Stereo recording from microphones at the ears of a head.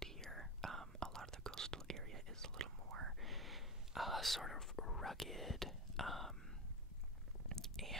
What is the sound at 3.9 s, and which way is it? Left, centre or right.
Whispering, centre.